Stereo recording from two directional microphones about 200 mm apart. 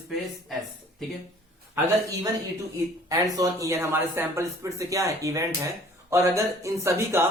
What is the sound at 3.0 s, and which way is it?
Speech, 15° right (ahead or behind).